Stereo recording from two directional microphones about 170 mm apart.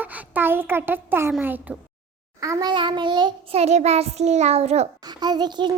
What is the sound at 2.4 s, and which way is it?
Child singing, 20° right (ahead or behind).